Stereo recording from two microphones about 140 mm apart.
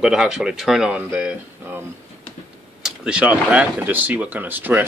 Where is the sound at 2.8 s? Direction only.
5° right (ahead or behind).